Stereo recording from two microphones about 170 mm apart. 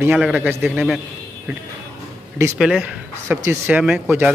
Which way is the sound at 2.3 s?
15° right (ahead or behind).